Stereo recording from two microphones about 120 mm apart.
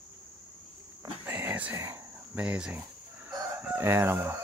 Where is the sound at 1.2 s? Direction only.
15° right (ahead or behind).